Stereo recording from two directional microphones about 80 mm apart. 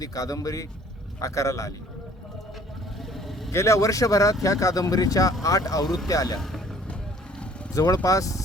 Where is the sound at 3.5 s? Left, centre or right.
Left.